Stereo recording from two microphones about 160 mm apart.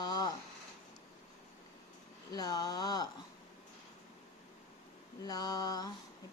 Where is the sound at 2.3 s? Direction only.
25° left (ahead or behind).